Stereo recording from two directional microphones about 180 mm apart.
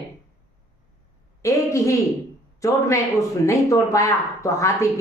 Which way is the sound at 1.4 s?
15° left (ahead or behind).